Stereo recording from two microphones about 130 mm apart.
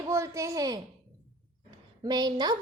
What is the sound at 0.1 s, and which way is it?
Speech, 25° right (ahead or behind).